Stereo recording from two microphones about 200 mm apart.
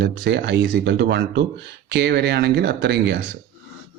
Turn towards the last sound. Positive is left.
turn(degrees=-55)  # may be behind; listen again after turning